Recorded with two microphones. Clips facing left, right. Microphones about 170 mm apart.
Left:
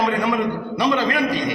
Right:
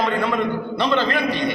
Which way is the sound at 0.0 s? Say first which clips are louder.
Left 1 dB; 15° left (ahead or behind).